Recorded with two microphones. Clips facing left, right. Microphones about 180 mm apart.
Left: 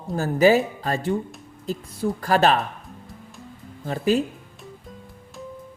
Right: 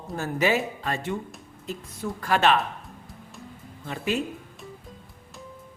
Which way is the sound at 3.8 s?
35° left (ahead or behind).